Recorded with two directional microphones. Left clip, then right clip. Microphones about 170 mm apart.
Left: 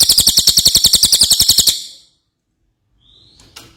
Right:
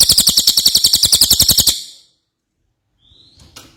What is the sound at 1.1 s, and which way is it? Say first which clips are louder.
Bird: left 1 dB; centre (ahead or behind).